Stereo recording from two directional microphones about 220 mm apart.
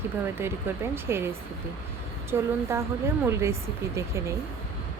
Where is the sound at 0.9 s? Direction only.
10° right (ahead or behind).